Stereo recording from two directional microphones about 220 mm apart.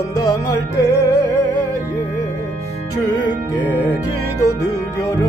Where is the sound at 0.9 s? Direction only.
15° left (ahead or behind).